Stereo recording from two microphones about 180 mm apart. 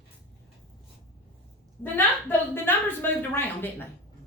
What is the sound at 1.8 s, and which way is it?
A woman's voice, 10° left (ahead or behind).